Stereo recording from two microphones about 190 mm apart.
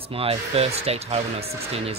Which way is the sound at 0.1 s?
30° right (ahead or behind).